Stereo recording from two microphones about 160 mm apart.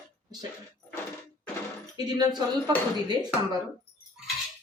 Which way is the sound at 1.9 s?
25° right (ahead or behind).